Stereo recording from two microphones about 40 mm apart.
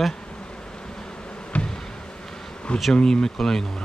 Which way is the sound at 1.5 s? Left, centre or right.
Left.